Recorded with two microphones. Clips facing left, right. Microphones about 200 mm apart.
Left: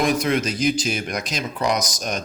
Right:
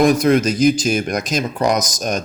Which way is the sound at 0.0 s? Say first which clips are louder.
Right 7 dB; 45° right (ahead or behind).